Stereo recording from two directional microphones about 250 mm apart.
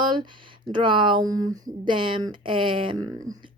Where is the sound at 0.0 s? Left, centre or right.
Centre.